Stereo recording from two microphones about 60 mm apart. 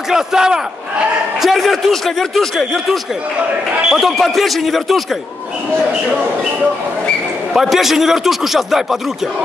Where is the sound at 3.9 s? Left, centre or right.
Centre.